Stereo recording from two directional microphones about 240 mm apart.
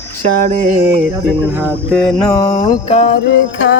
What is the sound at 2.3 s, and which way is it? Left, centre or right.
Music, centre.